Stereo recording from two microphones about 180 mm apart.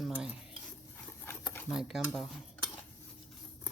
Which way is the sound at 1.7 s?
Centre (ahead or behind).